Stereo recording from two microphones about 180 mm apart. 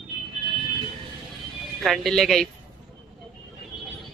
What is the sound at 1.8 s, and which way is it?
Speech, centre (ahead or behind).